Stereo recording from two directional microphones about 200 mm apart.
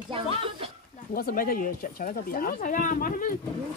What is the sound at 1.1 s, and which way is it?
Speech, 45° left (ahead or behind).